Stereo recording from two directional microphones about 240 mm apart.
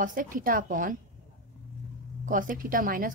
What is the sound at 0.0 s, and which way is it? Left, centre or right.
Speech, right.